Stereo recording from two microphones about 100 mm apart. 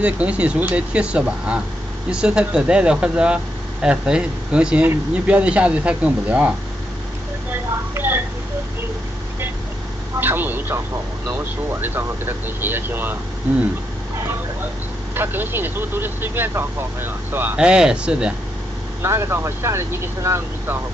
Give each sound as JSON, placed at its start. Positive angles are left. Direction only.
{"t": 0.0, "sound": "speech", "side_deg": -10}
{"t": 7.9, "sound": "a sound", "side_deg": -20}
{"t": 10.2, "sound": "speech", "side_deg": -20}
{"t": 15.1, "sound": "speech", "side_deg": -20}
{"t": 17.6, "sound": "speech", "side_deg": -10}
{"t": 19.0, "sound": "speech", "side_deg": -25}